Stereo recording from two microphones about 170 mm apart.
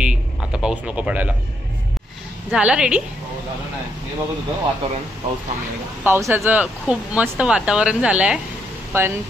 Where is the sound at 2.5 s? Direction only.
5° right (ahead or behind).